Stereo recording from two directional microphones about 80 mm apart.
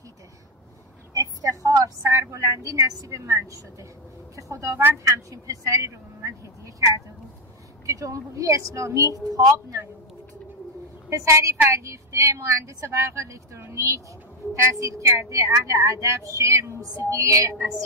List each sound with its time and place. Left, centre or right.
1.1 s a woman's voice: right
7.8 s a woman's voice: right
11.1 s a woman's voice: right